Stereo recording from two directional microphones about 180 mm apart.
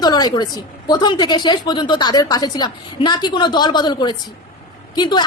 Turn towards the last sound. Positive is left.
turn(degrees=25)  # may be behind; listen again after turning